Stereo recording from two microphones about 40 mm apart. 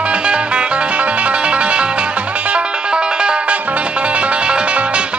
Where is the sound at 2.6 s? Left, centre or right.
Right.